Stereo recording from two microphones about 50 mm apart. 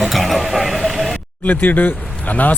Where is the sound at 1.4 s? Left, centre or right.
Left.